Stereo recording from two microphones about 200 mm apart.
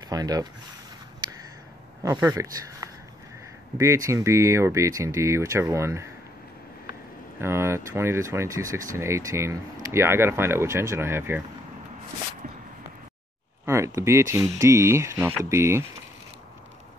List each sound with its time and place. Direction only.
0.1 s speech: 20° right (ahead or behind)
2.0 s speech: 15° right (ahead or behind)
7.3 s speech: 15° right (ahead or behind)
13.7 s speech: 15° right (ahead or behind)